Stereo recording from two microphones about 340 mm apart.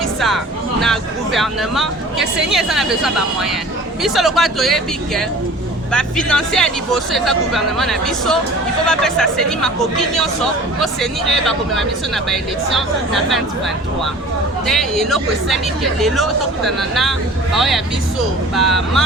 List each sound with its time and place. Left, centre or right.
0.2 s speech: centre
10.8 s speech: centre
14.7 s speech: centre